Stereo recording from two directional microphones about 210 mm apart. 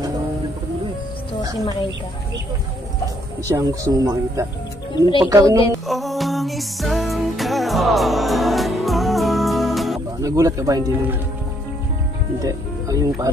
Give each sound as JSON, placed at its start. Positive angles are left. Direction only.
{"t": 3.4, "sound": "speech", "side_deg": -15}
{"t": 4.9, "sound": "speech", "side_deg": 20}
{"t": 5.2, "sound": "speech", "side_deg": -15}
{"t": 5.9, "sound": "music", "side_deg": 0}
{"t": 10.2, "sound": "speech", "side_deg": -15}
{"t": 12.4, "sound": "speech", "side_deg": -15}